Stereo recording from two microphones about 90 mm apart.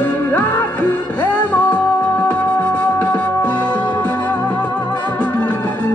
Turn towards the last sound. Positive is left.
turn(degrees=20)  # may be behind; listen again after turning